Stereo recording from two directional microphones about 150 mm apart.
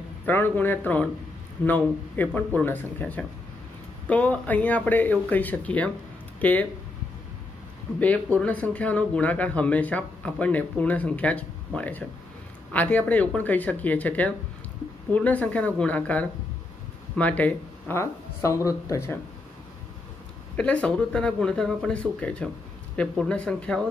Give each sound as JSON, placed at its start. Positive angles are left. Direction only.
{"t": 0.2, "sound": "speech", "side_deg": 15}
{"t": 8.0, "sound": "speech", "side_deg": 10}
{"t": 20.5, "sound": "speech", "side_deg": 10}